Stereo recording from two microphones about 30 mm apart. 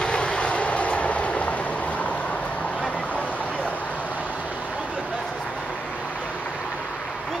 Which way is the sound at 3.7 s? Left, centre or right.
Left.